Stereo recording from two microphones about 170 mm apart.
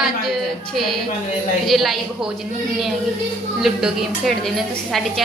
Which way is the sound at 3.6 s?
5° right (ahead or behind).